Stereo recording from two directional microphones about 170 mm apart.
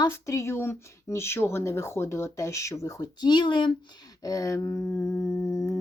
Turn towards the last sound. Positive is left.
turn(degrees=20)  # may be behind; listen again after turning